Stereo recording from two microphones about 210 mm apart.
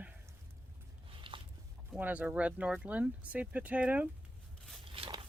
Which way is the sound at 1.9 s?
5° right (ahead or behind).